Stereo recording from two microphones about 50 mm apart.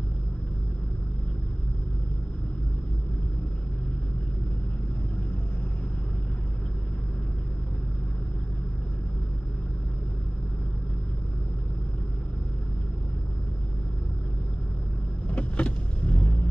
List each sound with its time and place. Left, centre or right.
15.2 s vehicle: left